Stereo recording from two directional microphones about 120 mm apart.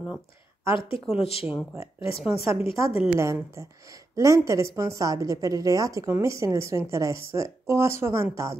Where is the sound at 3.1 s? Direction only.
25° right (ahead or behind).